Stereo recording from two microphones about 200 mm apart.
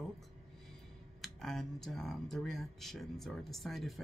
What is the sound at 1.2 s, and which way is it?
Speech, centre (ahead or behind).